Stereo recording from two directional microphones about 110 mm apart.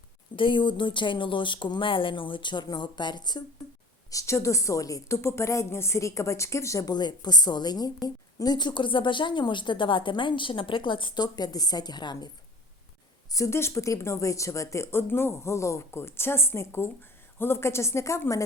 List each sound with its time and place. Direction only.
0.3 s speech: 50° left (ahead or behind)
4.1 s a woman's voice: 30° left (ahead or behind)
13.3 s a woman's voice: 25° left (ahead or behind)